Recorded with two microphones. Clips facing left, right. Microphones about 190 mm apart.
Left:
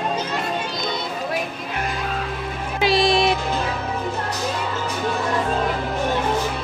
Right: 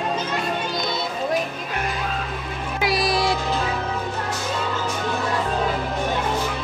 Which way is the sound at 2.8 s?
25° left (ahead or behind).